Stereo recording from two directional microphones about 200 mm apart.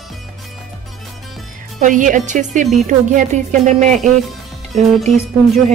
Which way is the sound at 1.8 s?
40° right (ahead or behind).